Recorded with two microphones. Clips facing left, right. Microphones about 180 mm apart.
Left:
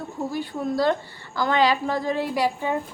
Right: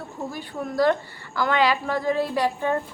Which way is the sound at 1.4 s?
35° left (ahead or behind).